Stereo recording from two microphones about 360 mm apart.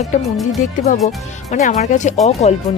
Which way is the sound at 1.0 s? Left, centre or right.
Centre.